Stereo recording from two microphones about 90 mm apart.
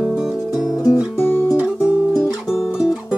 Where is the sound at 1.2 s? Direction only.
25° left (ahead or behind).